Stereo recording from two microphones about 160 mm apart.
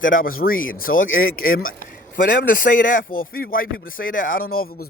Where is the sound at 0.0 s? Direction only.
60° left (ahead or behind).